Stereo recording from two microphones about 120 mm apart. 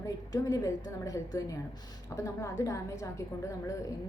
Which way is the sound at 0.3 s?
25° left (ahead or behind).